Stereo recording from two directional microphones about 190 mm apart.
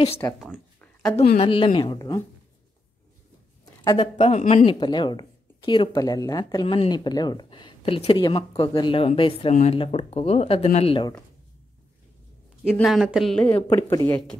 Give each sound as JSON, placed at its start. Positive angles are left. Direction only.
{"t": 0.4, "sound": "a sound", "side_deg": 0}
{"t": 1.3, "sound": "speech", "side_deg": 30}
{"t": 3.6, "sound": "a sound", "side_deg": 20}
{"t": 4.0, "sound": "speech", "side_deg": 35}
{"t": 4.6, "sound": "speech", "side_deg": 25}
{"t": 12.7, "sound": "speech", "side_deg": 0}
{"t": 13.7, "sound": "speech", "side_deg": 15}